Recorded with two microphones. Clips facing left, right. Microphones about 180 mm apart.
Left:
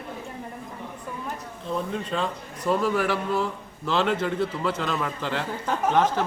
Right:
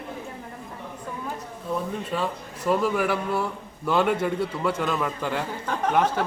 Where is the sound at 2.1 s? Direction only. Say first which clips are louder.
Even; 10° right (ahead or behind).